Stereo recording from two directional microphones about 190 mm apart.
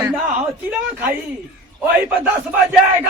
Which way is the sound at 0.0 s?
10° right (ahead or behind).